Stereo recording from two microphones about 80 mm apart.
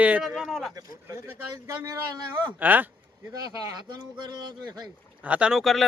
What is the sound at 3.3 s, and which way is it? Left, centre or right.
Speech, right.